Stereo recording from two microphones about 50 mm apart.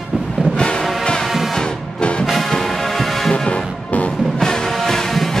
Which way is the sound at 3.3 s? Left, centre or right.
Left.